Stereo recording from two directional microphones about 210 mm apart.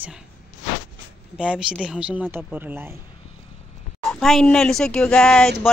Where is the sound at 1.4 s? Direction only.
5° right (ahead or behind).